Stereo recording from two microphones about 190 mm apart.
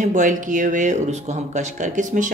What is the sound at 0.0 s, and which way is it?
A woman's voice, 40° right (ahead or behind).